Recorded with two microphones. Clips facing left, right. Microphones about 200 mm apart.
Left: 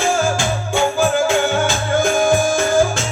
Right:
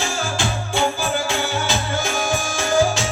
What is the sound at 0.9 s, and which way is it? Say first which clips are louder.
Music: left 7 dB; 50° left (ahead or behind).